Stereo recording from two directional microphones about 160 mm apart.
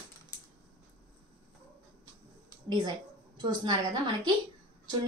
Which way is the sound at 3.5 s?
30° right (ahead or behind).